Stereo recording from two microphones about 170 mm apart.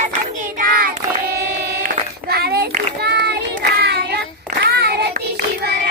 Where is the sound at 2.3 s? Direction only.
65° right (ahead or behind).